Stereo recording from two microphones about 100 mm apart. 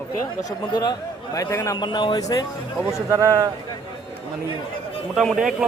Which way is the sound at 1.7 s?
50° left (ahead or behind).